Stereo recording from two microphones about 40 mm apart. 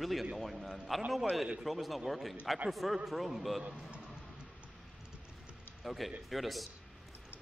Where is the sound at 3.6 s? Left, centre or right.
Right.